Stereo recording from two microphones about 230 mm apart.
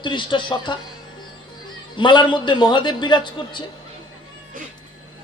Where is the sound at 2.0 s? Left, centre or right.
Centre.